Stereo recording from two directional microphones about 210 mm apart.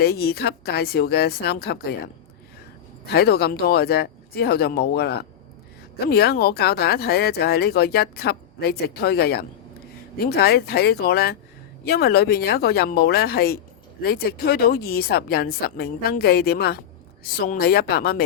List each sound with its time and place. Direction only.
0.0 s speech: 50° left (ahead or behind)
3.1 s speech: 50° left (ahead or behind)